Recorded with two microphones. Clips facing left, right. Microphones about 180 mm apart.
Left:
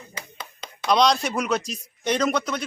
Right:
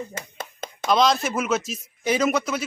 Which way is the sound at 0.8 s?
Centre (ahead or behind).